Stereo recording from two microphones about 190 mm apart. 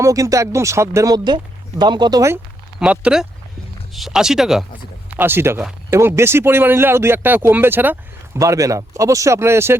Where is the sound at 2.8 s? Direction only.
5° right (ahead or behind).